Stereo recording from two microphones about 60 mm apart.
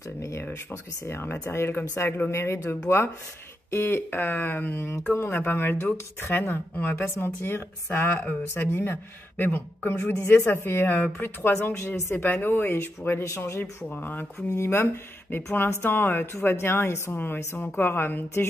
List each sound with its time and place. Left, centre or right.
0.2 s speech: left
2.3 s a woman's voice: left
13.8 s a woman's voice: left
14.5 s a woman's voice: left
17.6 s a woman's voice: left